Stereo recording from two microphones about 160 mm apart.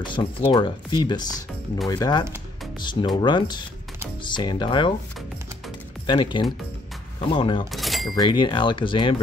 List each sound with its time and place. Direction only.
0.0 s speech: 30° left (ahead or behind)
6.0 s speech: 30° left (ahead or behind)
7.7 s a sound: centre (ahead or behind)
8.1 s speech: 25° left (ahead or behind)